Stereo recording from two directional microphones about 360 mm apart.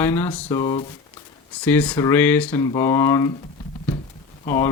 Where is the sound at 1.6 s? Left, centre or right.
Centre.